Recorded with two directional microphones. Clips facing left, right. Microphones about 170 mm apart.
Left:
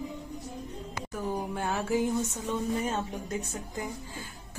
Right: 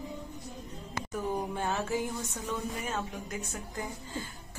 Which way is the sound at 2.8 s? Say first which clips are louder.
Left 4 dB; 30° left (ahead or behind).